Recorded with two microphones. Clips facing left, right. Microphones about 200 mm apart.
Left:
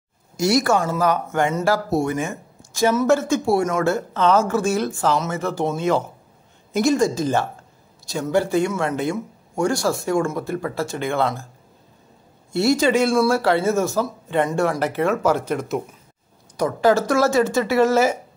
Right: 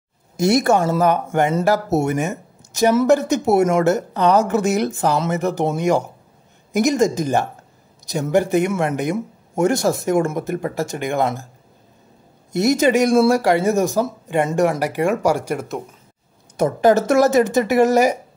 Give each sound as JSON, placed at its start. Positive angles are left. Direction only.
{"t": 1.3, "sound": "speech", "side_deg": -20}
{"t": 12.5, "sound": "speech", "side_deg": -20}
{"t": 16.5, "sound": "speech", "side_deg": -20}